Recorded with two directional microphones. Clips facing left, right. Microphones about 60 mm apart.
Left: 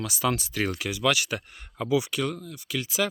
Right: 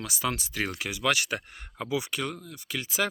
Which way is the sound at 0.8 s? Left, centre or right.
Right.